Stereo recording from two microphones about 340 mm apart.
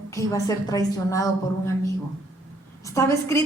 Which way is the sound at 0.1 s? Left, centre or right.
Centre.